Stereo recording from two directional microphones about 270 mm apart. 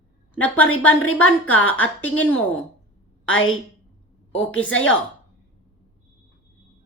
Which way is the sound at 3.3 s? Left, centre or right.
Left.